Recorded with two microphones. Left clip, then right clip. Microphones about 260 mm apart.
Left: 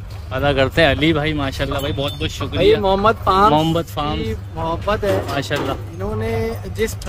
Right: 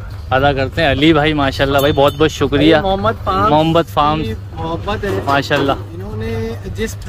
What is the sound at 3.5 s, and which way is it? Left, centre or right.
Speech, centre.